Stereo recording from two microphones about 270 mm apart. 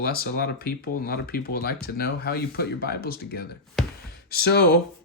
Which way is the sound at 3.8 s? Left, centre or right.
Centre.